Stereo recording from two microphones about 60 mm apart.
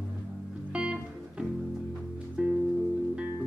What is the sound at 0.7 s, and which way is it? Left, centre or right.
Music, centre.